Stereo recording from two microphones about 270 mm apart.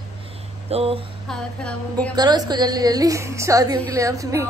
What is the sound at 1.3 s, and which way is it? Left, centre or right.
Speech, centre.